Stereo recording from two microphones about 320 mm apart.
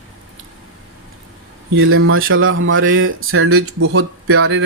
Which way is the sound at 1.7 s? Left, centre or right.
Right.